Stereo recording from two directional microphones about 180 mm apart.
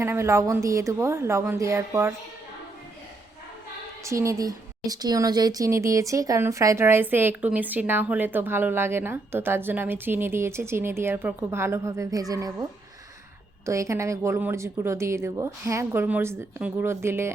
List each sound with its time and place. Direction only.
0.0 s a woman's voice: 15° right (ahead or behind)
4.0 s a woman's voice: 15° right (ahead or behind)
13.7 s a woman's voice: 15° right (ahead or behind)